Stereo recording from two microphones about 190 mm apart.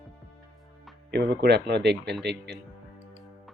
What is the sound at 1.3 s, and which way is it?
Speech, 60° right (ahead or behind).